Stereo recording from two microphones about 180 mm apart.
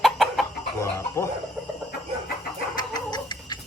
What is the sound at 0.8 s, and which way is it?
Chicken, 15° left (ahead or behind).